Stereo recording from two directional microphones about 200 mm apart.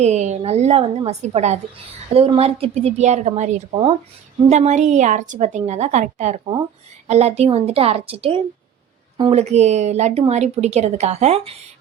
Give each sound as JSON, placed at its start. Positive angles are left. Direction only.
{"t": 0.0, "sound": "a woman's voice", "side_deg": -35}